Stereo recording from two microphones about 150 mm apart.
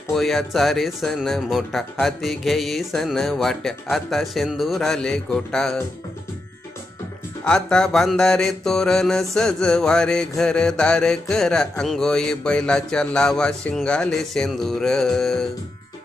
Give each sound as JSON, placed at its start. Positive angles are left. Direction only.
{"t": 0.1, "sound": "mantra", "side_deg": 0}
{"t": 7.4, "sound": "mantra", "side_deg": 5}